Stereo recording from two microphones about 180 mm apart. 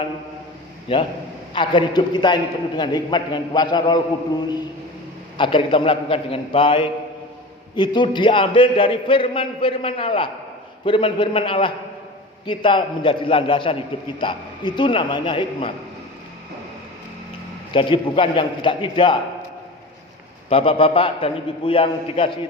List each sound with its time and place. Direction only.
0.9 s a man's voice: 30° left (ahead or behind)
5.4 s a man's voice: 30° left (ahead or behind)
17.7 s a man's voice: 30° left (ahead or behind)
20.5 s a man's voice: 30° left (ahead or behind)